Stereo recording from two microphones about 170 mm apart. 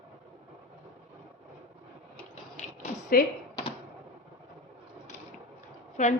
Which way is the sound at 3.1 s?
60° left (ahead or behind).